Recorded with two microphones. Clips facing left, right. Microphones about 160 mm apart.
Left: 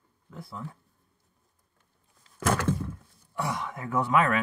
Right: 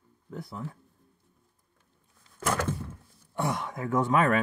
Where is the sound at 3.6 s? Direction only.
40° right (ahead or behind).